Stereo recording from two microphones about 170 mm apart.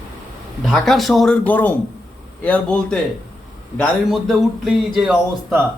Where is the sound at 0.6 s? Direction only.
Centre (ahead or behind).